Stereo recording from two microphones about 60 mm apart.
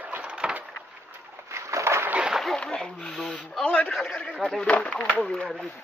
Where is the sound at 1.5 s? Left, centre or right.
Right.